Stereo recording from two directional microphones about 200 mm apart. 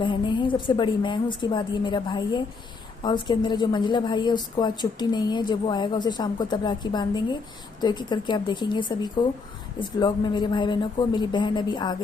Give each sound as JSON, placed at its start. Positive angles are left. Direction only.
{"t": 0.0, "sound": "a woman's voice", "side_deg": 25}